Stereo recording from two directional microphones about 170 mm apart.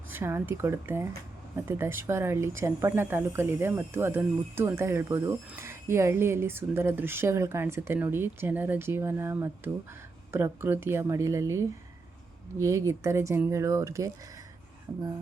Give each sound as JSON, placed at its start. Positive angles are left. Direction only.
{"t": 0.1, "sound": "speech", "side_deg": -15}